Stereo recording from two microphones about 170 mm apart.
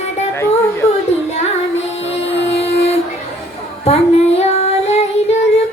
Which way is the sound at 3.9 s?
35° left (ahead or behind).